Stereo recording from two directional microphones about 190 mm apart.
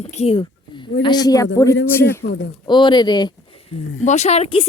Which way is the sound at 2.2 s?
60° left (ahead or behind).